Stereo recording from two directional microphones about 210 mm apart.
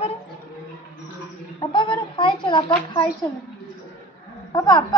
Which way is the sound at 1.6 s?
25° left (ahead or behind).